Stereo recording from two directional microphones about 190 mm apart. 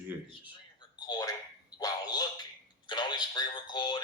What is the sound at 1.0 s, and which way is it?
Speech, 20° left (ahead or behind).